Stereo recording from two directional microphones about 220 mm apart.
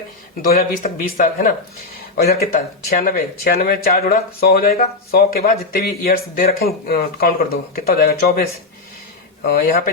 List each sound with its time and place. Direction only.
0.4 s speech: 40° left (ahead or behind)
2.9 s speech: 45° left (ahead or behind)